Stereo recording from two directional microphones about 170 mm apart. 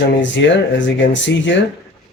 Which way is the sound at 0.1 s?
90° left.